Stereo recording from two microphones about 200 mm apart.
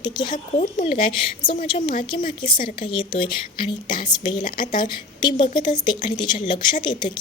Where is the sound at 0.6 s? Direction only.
40° left (ahead or behind).